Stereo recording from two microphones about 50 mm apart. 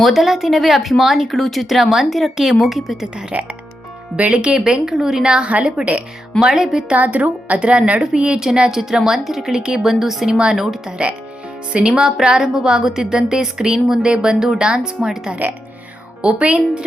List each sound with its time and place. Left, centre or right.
0.0 s speech: centre
3.3 s a woman's voice: right
4.3 s a woman's voice: centre
6.4 s a woman's voice: centre
6.9 s a woman's voice: right
7.6 s a woman's voice: right
9.8 s speech: centre
10.3 s a woman's voice: centre
16.2 s speech: right